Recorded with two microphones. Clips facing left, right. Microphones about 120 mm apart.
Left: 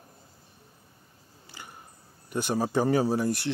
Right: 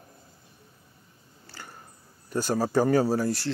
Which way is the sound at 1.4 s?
15° left (ahead or behind).